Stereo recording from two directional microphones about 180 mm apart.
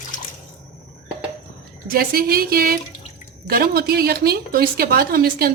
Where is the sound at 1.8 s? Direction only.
55° right (ahead or behind).